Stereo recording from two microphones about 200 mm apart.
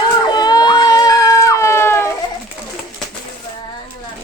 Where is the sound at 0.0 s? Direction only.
20° left (ahead or behind).